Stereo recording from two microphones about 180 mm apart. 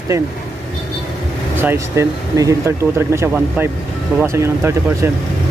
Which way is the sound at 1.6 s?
15° right (ahead or behind).